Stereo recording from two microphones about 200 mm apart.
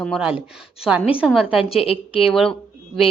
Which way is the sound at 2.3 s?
Centre (ahead or behind).